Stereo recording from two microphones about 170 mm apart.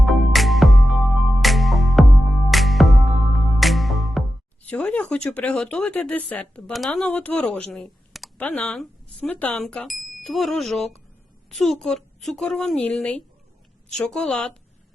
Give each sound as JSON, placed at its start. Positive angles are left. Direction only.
{"t": 0.0, "sound": "music", "side_deg": 0}
{"t": 4.6, "sound": "speech", "side_deg": 5}